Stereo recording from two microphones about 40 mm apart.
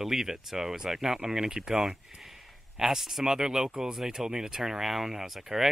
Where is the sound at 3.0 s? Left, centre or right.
Centre.